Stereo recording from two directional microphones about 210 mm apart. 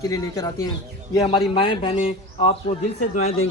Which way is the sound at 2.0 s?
35° left (ahead or behind).